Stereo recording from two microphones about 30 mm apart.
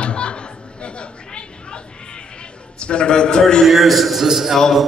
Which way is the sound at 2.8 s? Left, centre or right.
Left.